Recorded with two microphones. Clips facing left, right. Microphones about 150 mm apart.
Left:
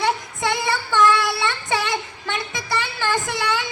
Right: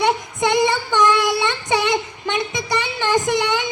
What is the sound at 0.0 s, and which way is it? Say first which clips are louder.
Child singing: right 4 dB; 20° right (ahead or behind).